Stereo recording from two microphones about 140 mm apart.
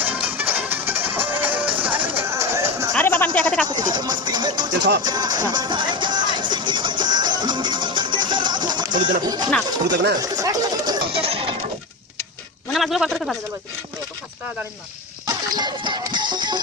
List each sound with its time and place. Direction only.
0.0 s music: 15° right (ahead or behind)
3.0 s a sound: 15° left (ahead or behind)
3.3 s speech: 10° left (ahead or behind)
3.7 s music: 30° right (ahead or behind)
9.2 s speech: 30° right (ahead or behind)
10.2 s chatter: 25° right (ahead or behind)
11.1 s a sound: 40° right (ahead or behind)
12.7 s a man's voice: centre (ahead or behind)
15.3 s music: 30° right (ahead or behind)